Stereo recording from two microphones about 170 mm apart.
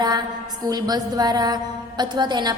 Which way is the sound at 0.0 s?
25° right (ahead or behind).